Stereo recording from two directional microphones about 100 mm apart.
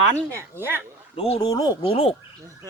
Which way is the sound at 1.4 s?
40° left (ahead or behind).